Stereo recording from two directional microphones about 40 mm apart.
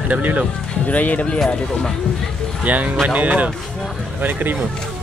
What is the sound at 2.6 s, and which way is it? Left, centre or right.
Speech, right.